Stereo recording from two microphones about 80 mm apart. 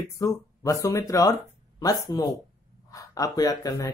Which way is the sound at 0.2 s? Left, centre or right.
Left.